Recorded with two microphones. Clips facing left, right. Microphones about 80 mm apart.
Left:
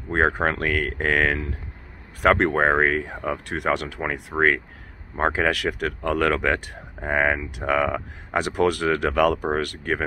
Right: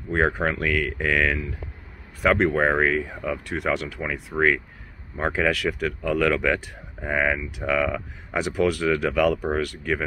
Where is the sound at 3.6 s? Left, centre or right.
Left.